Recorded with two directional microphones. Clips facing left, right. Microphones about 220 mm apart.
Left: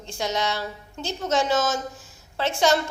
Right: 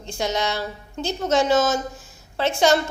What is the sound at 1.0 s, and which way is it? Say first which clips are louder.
Speech: right 4 dB; 60° right (ahead or behind).